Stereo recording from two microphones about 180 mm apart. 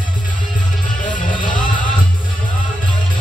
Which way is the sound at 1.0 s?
45° left (ahead or behind).